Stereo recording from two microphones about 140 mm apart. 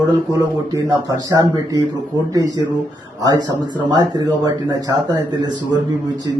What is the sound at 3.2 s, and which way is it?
A man's voice, 30° right (ahead or behind).